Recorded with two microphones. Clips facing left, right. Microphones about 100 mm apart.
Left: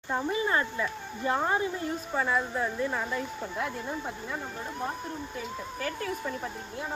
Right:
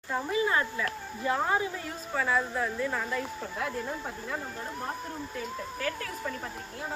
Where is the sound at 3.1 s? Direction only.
5° left (ahead or behind).